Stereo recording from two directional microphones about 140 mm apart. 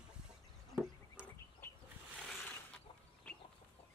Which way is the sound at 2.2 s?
5° left (ahead or behind).